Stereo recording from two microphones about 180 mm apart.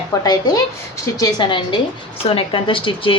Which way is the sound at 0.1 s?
20° left (ahead or behind).